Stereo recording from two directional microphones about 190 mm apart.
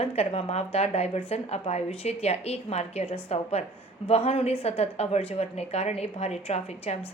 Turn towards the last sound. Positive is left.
turn(degrees=35)  # may be behind; listen again after turning